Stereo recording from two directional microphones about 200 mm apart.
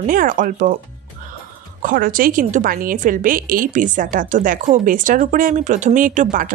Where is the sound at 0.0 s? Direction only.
45° right (ahead or behind).